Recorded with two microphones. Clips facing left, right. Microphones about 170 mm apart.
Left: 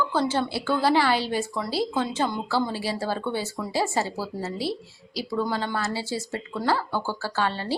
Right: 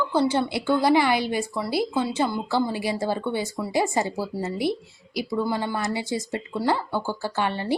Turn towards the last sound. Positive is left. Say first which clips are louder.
# right 1 dB
turn(degrees=-15)  # may be behind; listen again after turning